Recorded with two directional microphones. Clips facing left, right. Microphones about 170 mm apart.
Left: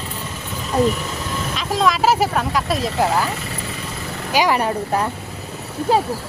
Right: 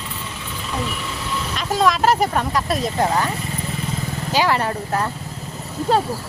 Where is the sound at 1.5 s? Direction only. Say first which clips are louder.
Right 1 dB; centre (ahead or behind).